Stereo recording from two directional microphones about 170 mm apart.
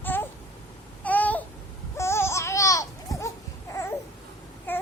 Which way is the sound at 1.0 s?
10° left (ahead or behind).